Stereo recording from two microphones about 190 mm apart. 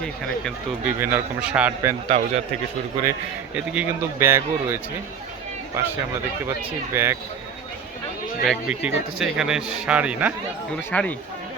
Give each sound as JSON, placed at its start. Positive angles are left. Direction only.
{"t": 0.0, "sound": "speech", "side_deg": 5}
{"t": 0.9, "sound": "a man's voice", "side_deg": -10}
{"t": 2.0, "sound": "a man's voice", "side_deg": -35}
{"t": 3.1, "sound": "a man's voice", "side_deg": -10}
{"t": 6.9, "sound": "a man's voice", "side_deg": -15}
{"t": 8.4, "sound": "speech", "side_deg": -5}
{"t": 10.9, "sound": "speech", "side_deg": 5}